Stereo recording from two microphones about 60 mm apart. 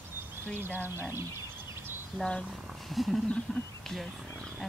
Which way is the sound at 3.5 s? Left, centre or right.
Centre.